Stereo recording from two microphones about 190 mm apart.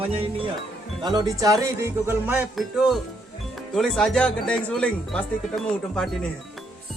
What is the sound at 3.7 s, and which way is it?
Speech, centre (ahead or behind).